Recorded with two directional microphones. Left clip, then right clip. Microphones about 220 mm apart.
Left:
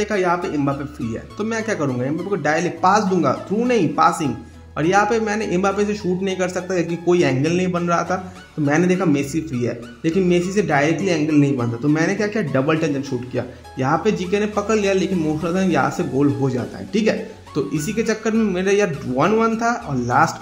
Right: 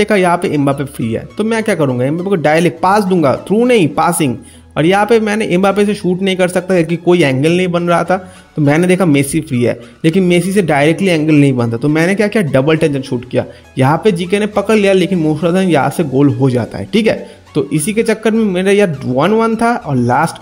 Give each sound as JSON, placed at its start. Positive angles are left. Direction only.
{"t": 0.0, "sound": "speech", "side_deg": -40}
{"t": 9.2, "sound": "speech", "side_deg": 0}
{"t": 9.6, "sound": "speech", "side_deg": -40}